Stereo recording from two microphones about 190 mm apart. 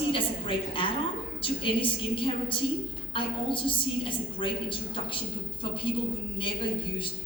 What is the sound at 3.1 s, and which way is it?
A woman's voice, 25° left (ahead or behind).